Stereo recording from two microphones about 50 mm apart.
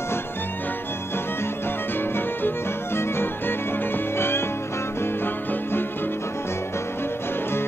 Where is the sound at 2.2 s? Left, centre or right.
Left.